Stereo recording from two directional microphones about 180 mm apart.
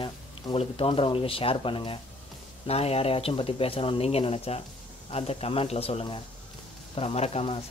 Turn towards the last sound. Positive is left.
turn(degrees=35)  # may be behind; listen again after turning